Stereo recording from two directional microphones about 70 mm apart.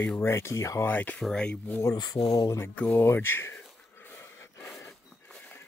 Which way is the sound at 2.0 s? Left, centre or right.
Left.